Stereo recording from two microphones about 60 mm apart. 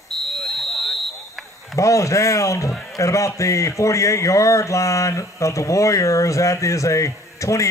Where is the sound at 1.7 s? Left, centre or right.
Left.